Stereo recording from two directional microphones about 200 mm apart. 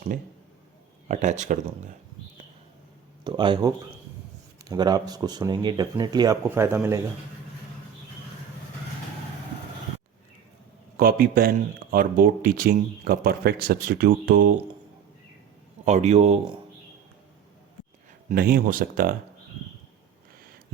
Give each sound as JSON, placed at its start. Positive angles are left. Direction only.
{"t": 1.0, "sound": "a man's voice", "side_deg": -35}
{"t": 3.2, "sound": "speech", "side_deg": -25}
{"t": 4.7, "sound": "speech", "side_deg": -20}
{"t": 10.9, "sound": "speech", "side_deg": -45}
{"t": 15.8, "sound": "a man's voice", "side_deg": -35}
{"t": 18.3, "sound": "speech", "side_deg": -45}